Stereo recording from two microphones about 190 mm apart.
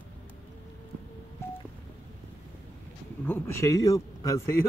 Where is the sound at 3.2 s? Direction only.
10° left (ahead or behind).